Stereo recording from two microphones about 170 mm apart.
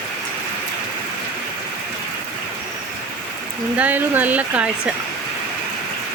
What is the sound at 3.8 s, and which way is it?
Speech, 10° right (ahead or behind).